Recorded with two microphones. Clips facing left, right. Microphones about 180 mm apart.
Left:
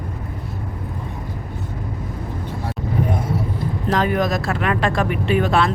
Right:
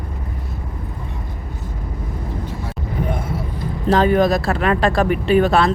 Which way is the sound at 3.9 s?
30° right (ahead or behind).